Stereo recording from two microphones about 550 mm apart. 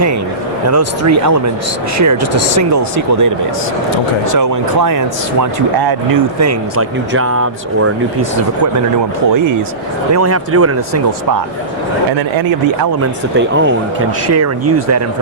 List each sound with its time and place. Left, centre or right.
0.7 s speech: right
10.1 s speech: right
13.0 s speech: centre